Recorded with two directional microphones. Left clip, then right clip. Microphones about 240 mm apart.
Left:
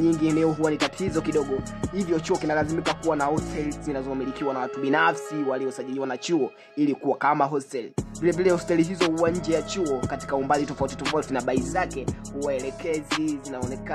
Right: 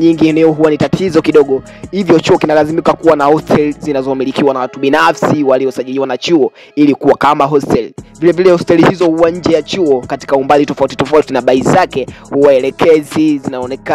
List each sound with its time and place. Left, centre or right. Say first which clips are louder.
0.0 s speech: right 13 dB; right
2.8 s speech: right 15 dB; centre
3.1 s speech: right 18 dB; right